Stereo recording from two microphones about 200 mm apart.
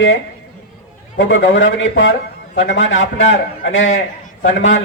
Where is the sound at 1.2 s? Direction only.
65° left (ahead or behind).